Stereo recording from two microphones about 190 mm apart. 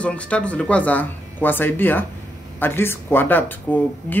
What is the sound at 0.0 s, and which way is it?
Speech, 5° left (ahead or behind).